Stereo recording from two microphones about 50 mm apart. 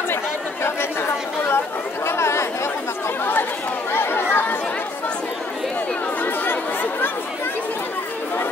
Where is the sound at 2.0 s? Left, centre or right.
Left.